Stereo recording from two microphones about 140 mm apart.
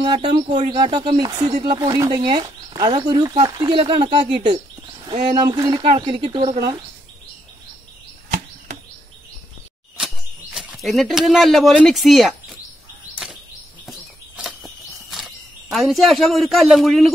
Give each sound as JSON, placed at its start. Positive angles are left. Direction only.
{"t": 0.0, "sound": "speech", "side_deg": -30}
{"t": 9.9, "sound": "speech", "side_deg": 0}
{"t": 13.1, "sound": "a sound", "side_deg": -10}
{"t": 13.8, "sound": "cricket", "side_deg": 0}